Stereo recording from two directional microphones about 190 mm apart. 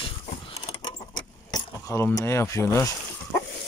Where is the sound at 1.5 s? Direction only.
15° left (ahead or behind).